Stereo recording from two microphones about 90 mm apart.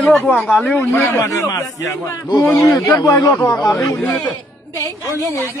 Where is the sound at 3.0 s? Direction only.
40° left (ahead or behind).